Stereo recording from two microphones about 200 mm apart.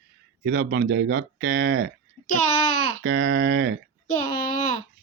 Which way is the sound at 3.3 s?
50° right (ahead or behind).